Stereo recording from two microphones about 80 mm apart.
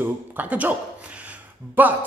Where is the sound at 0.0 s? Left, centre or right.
Right.